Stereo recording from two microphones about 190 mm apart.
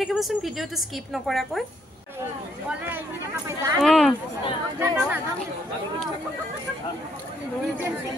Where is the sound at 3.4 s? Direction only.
15° right (ahead or behind).